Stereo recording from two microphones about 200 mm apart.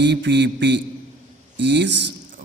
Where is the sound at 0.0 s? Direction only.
60° right (ahead or behind).